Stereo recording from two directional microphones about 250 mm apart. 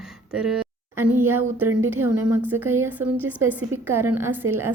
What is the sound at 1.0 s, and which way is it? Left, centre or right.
A woman's voice, centre.